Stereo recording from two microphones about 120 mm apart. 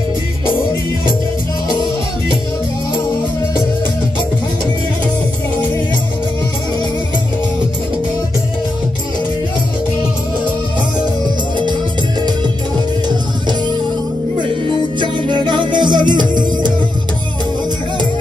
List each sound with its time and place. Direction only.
13.1 s music: 40° right (ahead or behind)
15.0 s music: 40° right (ahead or behind)